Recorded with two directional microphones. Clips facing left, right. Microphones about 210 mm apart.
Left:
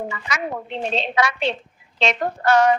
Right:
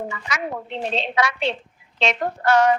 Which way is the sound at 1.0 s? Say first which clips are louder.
Left 1 dB; 40° left (ahead or behind).